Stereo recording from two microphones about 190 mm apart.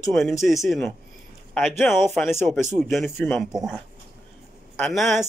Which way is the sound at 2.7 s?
Centre (ahead or behind).